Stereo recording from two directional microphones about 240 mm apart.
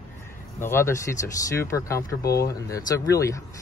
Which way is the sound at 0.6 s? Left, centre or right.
Centre.